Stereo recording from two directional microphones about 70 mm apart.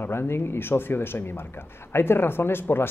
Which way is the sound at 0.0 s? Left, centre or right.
Left.